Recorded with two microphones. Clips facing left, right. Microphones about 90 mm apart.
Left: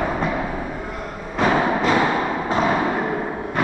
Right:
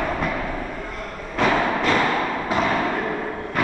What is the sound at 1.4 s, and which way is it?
Timpani, 20° left (ahead or behind).